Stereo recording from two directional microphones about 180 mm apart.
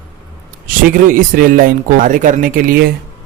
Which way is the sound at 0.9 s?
50° right (ahead or behind).